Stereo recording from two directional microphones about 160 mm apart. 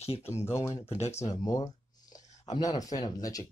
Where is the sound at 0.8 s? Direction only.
40° left (ahead or behind).